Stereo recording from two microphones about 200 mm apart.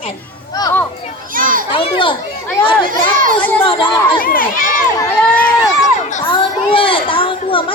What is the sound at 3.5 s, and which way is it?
Speech, 25° left (ahead or behind).